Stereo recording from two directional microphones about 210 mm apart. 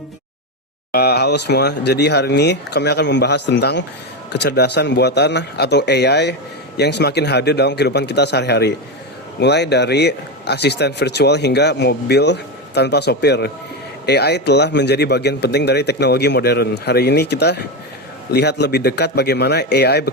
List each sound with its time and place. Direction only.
0.9 s speech: 50° left (ahead or behind)